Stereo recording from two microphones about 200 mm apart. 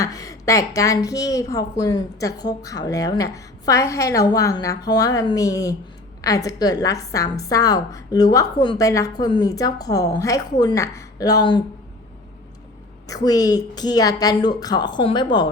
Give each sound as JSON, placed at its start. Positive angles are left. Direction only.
{"t": 0.0, "sound": "a woman's voice", "side_deg": 15}
{"t": 13.1, "sound": "a woman's voice", "side_deg": 20}